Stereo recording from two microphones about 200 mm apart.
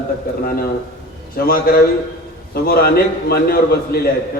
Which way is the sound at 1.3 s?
50° left (ahead or behind).